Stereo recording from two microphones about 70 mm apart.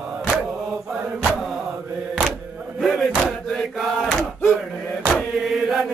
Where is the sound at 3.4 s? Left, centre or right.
Centre.